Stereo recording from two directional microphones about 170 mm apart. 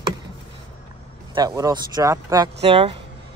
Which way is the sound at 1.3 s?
20° right (ahead or behind).